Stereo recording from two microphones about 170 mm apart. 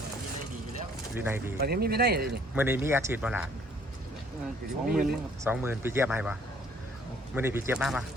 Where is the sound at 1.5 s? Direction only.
65° right (ahead or behind).